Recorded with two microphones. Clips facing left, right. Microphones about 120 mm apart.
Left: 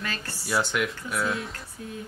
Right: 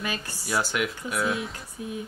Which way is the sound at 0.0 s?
15° right (ahead or behind).